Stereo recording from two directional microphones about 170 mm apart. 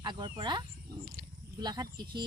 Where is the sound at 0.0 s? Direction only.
25° right (ahead or behind).